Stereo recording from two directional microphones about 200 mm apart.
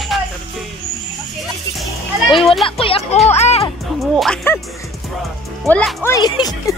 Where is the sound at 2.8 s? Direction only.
30° left (ahead or behind).